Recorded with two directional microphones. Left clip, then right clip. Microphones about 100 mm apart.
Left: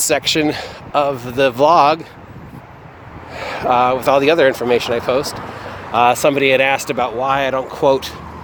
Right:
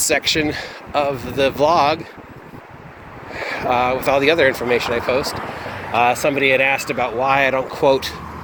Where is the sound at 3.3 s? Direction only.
70° left (ahead or behind).